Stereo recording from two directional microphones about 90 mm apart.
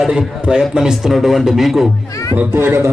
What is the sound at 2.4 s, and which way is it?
Speech, 25° right (ahead or behind).